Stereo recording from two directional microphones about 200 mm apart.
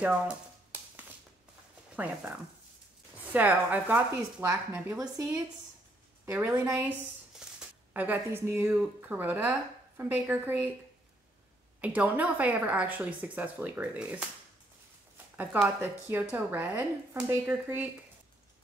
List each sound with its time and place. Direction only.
0.0 s a sound: 5° right (ahead or behind)
3.3 s speech: 10° right (ahead or behind)
7.4 s a sound: 5° right (ahead or behind)
7.9 s speech: 10° right (ahead or behind)
11.8 s speech: 5° right (ahead or behind)
15.3 s speech: 10° right (ahead or behind)